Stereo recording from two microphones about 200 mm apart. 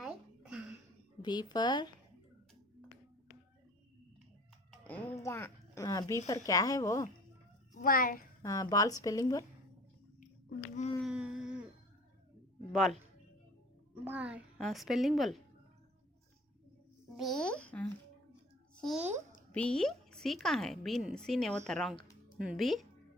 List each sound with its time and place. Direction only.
0.0 s a sound: 5° right (ahead or behind)
1.2 s speech: 20° left (ahead or behind)
4.7 s music: 10° left (ahead or behind)
5.2 s a woman's voice: 15° left (ahead or behind)
7.7 s a child's voice: 45° left (ahead or behind)
8.4 s a woman's voice: 15° left (ahead or behind)
11.0 s a sound: 5° right (ahead or behind)
12.7 s speech: centre (ahead or behind)
14.0 s speech: 5° right (ahead or behind)
17.2 s speech: centre (ahead or behind)
19.5 s speech: 5° left (ahead or behind)